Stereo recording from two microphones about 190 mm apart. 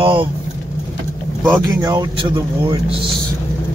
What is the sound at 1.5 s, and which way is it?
Speech, 15° right (ahead or behind).